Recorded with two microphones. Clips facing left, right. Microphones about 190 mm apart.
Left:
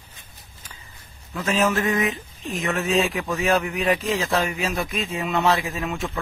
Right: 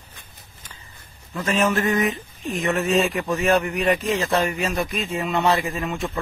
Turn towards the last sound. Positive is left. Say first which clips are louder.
# right 1 dB
turn(degrees=0)  # may be behind; listen again after turning